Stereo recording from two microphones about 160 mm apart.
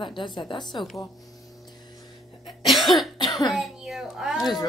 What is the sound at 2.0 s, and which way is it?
Cough, centre (ahead or behind).